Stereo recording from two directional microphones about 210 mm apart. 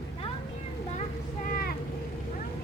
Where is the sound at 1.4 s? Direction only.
45° left (ahead or behind).